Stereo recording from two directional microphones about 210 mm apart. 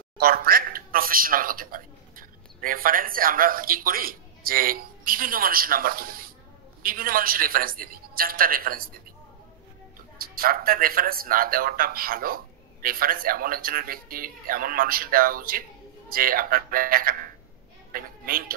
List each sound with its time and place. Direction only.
0.2 s speech: 45° right (ahead or behind)
10.1 s a woman's voice: 45° right (ahead or behind)